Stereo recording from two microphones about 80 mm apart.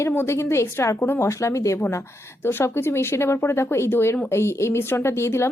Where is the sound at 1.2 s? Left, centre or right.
Left.